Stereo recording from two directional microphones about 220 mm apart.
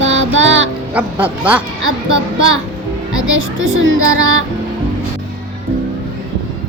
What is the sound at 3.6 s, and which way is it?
Music, 60° right (ahead or behind).